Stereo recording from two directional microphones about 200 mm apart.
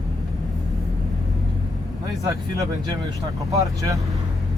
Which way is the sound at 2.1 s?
15° right (ahead or behind).